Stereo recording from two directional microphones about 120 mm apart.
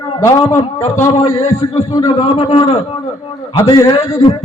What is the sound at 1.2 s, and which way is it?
Speech, 55° left (ahead or behind).